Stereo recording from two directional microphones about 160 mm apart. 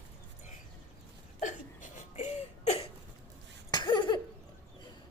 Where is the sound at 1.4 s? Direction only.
50° left (ahead or behind).